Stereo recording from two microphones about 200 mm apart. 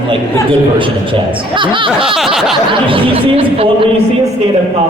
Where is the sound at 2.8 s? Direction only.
25° right (ahead or behind).